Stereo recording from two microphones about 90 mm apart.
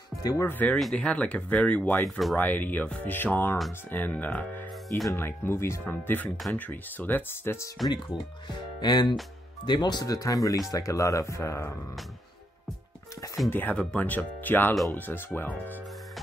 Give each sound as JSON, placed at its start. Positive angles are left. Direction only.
{"t": 0.4, "sound": "speech", "side_deg": 20}
{"t": 2.0, "sound": "speech", "side_deg": 0}
{"t": 2.3, "sound": "speech", "side_deg": 20}
{"t": 7.8, "sound": "speech", "side_deg": 0}
{"t": 8.5, "sound": "speech", "side_deg": 55}
{"t": 13.5, "sound": "speech", "side_deg": 20}